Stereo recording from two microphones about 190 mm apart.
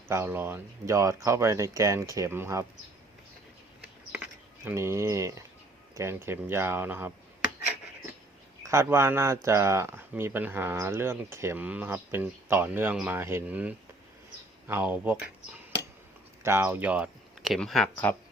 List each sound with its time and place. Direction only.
0.1 s speech: 10° right (ahead or behind)
4.6 s speech: 15° right (ahead or behind)
8.6 s speech: 15° right (ahead or behind); by 18.2 s 5° left (ahead or behind)